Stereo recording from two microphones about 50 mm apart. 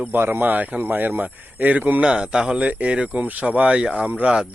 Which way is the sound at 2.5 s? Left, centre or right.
Right.